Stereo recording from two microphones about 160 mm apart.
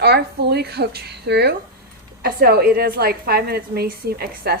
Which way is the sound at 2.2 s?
75° right (ahead or behind).